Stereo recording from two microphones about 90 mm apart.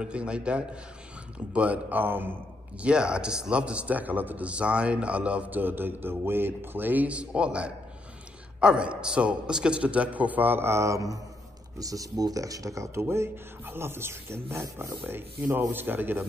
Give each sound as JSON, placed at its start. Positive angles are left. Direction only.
{"t": 0.0, "sound": "a man's voice", "side_deg": -10}
{"t": 2.8, "sound": "a man's voice", "side_deg": -10}